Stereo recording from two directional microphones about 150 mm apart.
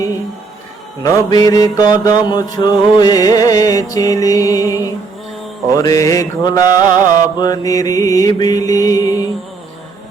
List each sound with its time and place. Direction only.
1.0 s mantra: 25° left (ahead or behind)